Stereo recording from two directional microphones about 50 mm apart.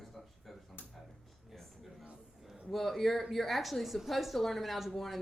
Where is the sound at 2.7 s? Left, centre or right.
Centre.